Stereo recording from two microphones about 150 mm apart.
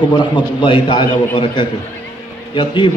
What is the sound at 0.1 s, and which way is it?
A man's voice, 30° left (ahead or behind).